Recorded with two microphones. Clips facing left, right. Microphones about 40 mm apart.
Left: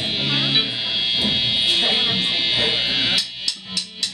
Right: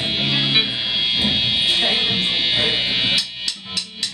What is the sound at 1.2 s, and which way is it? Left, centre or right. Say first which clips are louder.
Buzzer: right 1 dB; centre.